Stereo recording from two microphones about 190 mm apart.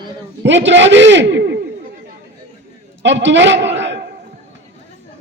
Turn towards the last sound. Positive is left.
turn(degrees=-65)  # may be behind; listen again after turning